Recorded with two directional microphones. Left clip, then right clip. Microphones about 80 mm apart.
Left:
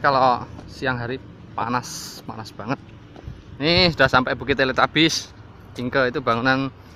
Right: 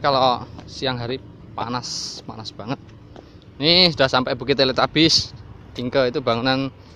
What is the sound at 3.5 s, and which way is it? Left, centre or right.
Speech, right.